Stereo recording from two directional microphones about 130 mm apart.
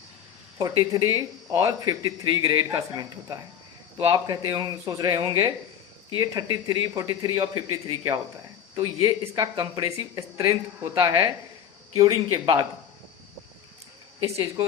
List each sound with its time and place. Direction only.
0.6 s speech: 30° right (ahead or behind)
11.9 s speech: 30° right (ahead or behind)
14.3 s speech: 25° right (ahead or behind)